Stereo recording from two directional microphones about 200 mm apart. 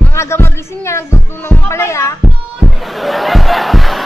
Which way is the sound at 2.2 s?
Centre (ahead or behind).